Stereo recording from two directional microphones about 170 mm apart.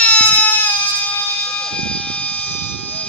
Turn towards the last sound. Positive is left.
turn(degrees=10)  # may be behind; listen again after turning